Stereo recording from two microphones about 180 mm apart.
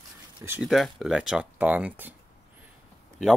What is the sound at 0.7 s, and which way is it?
Speech, centre (ahead or behind).